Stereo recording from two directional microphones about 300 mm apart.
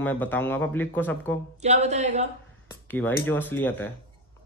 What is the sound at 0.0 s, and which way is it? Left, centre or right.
Speech, centre.